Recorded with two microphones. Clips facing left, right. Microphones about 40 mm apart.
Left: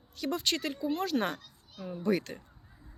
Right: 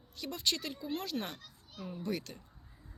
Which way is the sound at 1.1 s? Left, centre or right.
Left.